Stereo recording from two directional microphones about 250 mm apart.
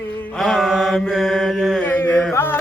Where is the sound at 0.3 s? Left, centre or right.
Centre.